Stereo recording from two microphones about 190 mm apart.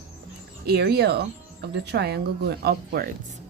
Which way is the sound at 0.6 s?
55° right (ahead or behind).